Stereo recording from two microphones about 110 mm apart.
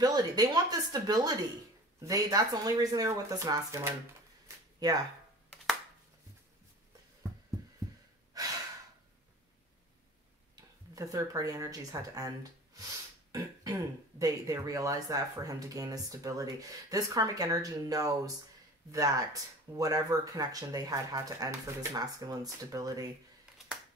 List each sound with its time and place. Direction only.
0.0 s speech: 35° right (ahead or behind)
8.3 s gasp: 35° right (ahead or behind)
11.0 s speech: 30° right (ahead or behind)
13.3 s speech: 30° right (ahead or behind)